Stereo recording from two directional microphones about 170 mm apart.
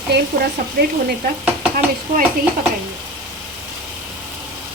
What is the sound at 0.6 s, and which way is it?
Speech, 65° right (ahead or behind).